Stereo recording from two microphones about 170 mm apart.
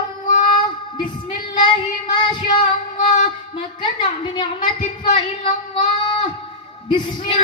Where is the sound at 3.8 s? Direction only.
30° left (ahead or behind).